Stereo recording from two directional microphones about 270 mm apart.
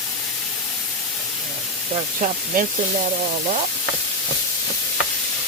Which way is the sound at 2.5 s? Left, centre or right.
Right.